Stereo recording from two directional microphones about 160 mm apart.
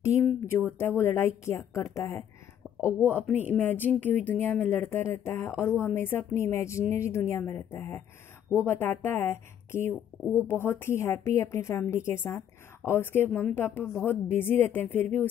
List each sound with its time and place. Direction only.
0.0 s a sound: 15° left (ahead or behind)
0.7 s a woman's voice: 15° left (ahead or behind)
2.8 s a woman's voice: 10° right (ahead or behind)
3.5 s a woman's voice: 10° left (ahead or behind)